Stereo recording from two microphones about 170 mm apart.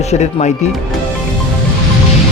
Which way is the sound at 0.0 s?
40° left (ahead or behind).